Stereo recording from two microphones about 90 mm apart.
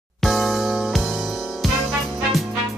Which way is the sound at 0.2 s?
Centre (ahead or behind).